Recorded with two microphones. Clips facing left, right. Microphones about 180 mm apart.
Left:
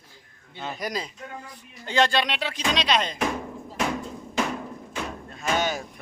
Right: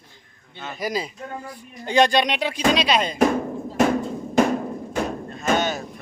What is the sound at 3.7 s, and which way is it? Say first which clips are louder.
Drum: right 8 dB; 45° right (ahead or behind).